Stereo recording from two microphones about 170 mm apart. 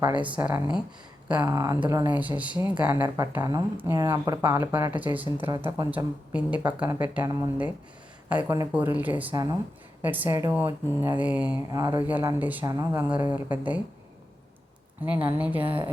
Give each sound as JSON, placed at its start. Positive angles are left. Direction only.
{"t": 0.3, "sound": "speech", "side_deg": -10}
{"t": 1.4, "sound": "speech", "side_deg": -20}
{"t": 2.1, "sound": "speech", "side_deg": -10}
{"t": 9.3, "sound": "speech", "side_deg": -20}
{"t": 10.0, "sound": "speech", "side_deg": -10}
{"t": 10.7, "sound": "speech", "side_deg": -20}
{"t": 11.2, "sound": "speech", "side_deg": -10}
{"t": 11.7, "sound": "speech", "side_deg": -20}
{"t": 12.0, "sound": "speech", "side_deg": -10}
{"t": 12.6, "sound": "speech", "side_deg": -20}
{"t": 15.3, "sound": "speech", "side_deg": -10}